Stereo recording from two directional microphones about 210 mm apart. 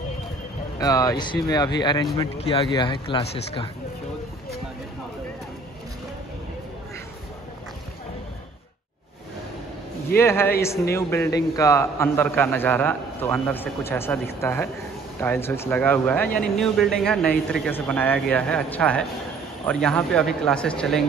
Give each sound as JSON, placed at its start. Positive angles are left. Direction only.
{"t": 0.7, "sound": "speech", "side_deg": 15}
{"t": 10.1, "sound": "a man's voice", "side_deg": 10}